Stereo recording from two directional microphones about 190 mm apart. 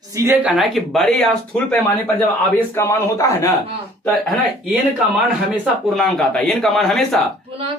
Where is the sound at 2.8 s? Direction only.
15° left (ahead or behind).